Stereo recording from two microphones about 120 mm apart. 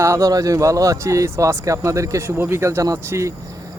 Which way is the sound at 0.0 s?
25° right (ahead or behind).